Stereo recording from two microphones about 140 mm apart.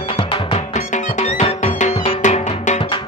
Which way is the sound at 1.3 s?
55° left (ahead or behind).